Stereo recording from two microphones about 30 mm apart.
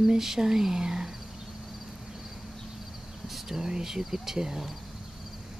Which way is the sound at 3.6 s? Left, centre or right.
Right.